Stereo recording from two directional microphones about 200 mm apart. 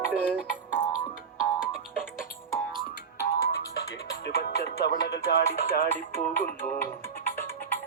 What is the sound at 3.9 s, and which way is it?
Music, 55° left (ahead or behind).